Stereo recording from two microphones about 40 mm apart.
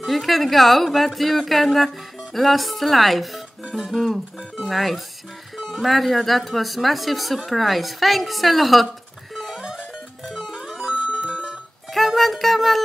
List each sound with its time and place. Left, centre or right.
0.0 s speech: centre
9.3 s music: centre
11.0 s music: right
11.9 s music: centre